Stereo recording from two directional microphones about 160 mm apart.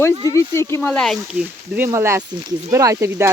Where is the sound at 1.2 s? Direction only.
10° right (ahead or behind).